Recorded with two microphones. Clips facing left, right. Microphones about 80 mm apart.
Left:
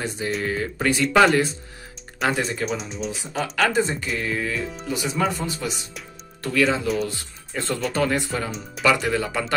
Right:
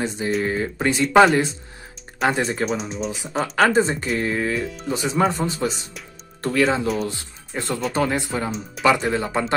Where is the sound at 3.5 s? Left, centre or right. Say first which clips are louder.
Right 4 dB; right.